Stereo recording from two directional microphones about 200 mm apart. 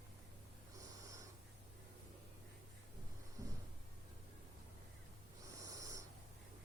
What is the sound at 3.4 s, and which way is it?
Cupboard open or close, 15° right (ahead or behind).